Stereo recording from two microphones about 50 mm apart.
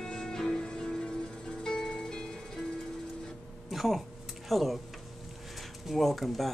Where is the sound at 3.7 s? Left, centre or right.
Centre.